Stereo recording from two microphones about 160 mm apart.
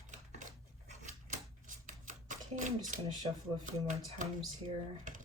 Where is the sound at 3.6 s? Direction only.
50° right (ahead or behind).